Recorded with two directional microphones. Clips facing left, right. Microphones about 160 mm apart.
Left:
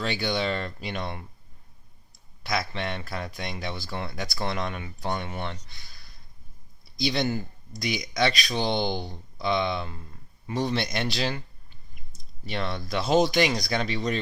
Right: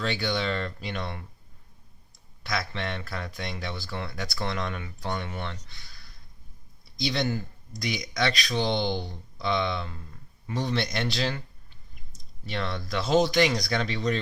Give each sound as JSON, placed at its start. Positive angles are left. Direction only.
{"t": 0.0, "sound": "speech", "side_deg": 15}
{"t": 2.4, "sound": "speech", "side_deg": 15}
{"t": 7.0, "sound": "speech", "side_deg": 15}
{"t": 12.5, "sound": "speech", "side_deg": 15}